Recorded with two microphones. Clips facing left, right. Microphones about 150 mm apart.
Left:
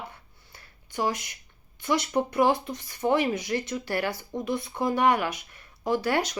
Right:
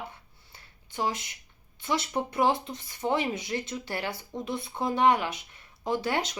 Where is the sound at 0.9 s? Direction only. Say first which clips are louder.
Left 3 dB; 25° right (ahead or behind).